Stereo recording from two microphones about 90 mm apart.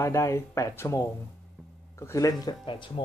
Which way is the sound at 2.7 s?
70° left (ahead or behind).